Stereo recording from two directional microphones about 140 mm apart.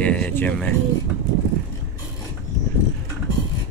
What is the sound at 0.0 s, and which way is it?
Speech, 10° left (ahead or behind).